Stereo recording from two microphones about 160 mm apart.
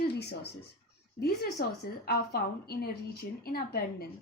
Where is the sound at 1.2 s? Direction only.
75° left (ahead or behind).